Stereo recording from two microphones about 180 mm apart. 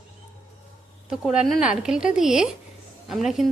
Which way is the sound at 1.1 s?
5° right (ahead or behind).